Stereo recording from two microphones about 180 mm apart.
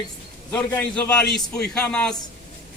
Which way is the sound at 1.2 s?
65° left (ahead or behind).